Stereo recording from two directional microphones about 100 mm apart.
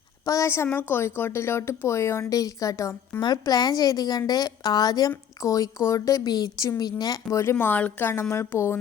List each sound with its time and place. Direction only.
0.3 s a woman's voice: 30° left (ahead or behind)
3.2 s a woman's voice: 45° left (ahead or behind)
7.6 s a woman's voice: 15° left (ahead or behind)